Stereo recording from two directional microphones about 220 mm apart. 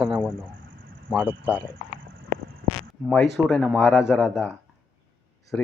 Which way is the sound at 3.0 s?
Centre (ahead or behind).